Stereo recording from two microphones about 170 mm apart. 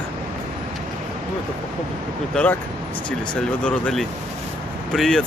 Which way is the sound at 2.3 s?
5° left (ahead or behind).